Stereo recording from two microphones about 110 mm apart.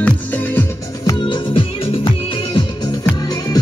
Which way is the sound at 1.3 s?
55° left (ahead or behind).